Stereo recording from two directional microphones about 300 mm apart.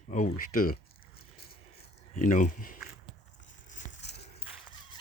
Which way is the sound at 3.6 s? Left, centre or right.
Left.